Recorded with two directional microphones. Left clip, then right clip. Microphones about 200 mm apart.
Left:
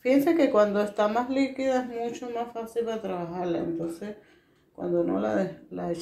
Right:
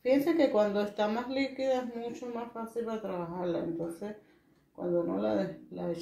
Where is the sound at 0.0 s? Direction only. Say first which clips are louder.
Left 4 dB; 35° left (ahead or behind).